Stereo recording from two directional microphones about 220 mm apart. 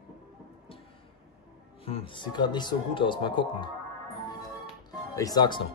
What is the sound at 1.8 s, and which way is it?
Speech, 25° left (ahead or behind).